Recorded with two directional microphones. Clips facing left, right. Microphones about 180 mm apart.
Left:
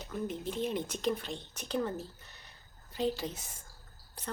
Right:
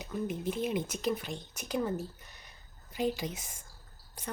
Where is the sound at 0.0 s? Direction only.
10° right (ahead or behind).